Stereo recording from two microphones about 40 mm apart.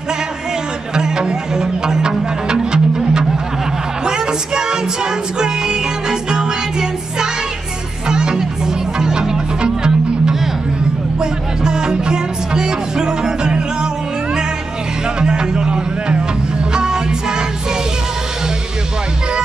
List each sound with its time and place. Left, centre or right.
0.9 s music: centre
15.1 s music: centre